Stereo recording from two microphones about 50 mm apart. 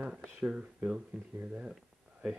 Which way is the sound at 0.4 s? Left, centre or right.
Right.